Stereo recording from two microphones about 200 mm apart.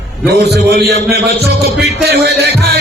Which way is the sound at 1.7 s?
55° right (ahead or behind).